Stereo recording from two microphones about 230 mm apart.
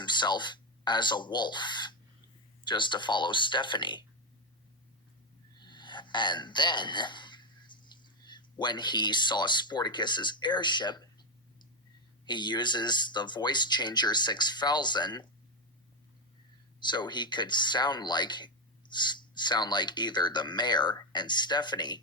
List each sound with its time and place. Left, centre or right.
0.0 s speech: centre
5.5 s speech: centre
12.2 s speech: centre
16.8 s speech: centre